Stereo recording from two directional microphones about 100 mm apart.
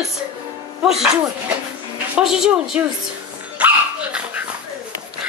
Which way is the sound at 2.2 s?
5° right (ahead or behind).